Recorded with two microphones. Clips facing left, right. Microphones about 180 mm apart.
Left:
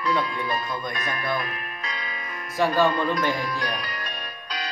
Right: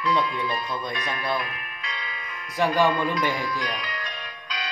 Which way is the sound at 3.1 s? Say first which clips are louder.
Left 1 dB; 50° left (ahead or behind).